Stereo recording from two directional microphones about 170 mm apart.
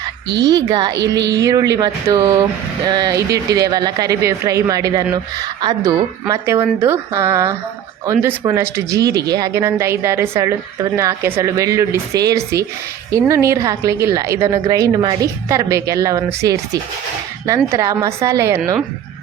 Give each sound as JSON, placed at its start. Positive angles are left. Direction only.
{"t": 0.3, "sound": "a woman's voice", "side_deg": -90}
{"t": 0.5, "sound": "speech", "side_deg": -25}
{"t": 1.2, "sound": "a woman's voice", "side_deg": -90}
{"t": 1.7, "sound": "a woman's voice", "side_deg": -20}